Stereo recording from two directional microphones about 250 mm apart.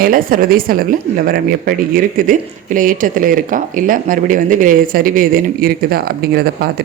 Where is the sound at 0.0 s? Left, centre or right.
Right.